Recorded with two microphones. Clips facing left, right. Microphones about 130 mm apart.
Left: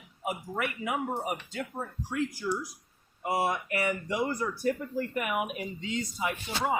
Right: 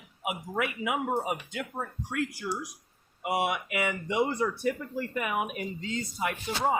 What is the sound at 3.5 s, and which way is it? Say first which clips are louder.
Speech: even; 90° right.